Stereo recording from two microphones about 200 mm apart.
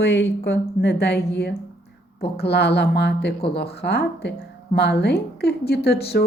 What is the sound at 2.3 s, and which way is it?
A woman's voice, 55° left (ahead or behind).